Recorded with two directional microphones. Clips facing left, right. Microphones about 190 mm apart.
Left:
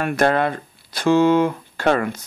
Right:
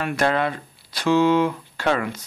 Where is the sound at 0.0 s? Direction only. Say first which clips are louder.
Left 3 dB; 50° left (ahead or behind).